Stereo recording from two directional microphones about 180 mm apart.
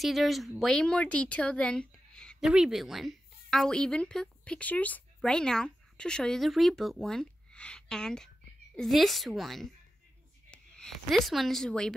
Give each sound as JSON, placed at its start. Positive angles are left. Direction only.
{"t": 0.0, "sound": "a woman's voice", "side_deg": 0}